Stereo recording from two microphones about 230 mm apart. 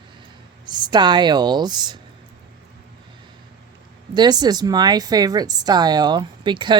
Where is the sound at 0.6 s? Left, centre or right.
Centre.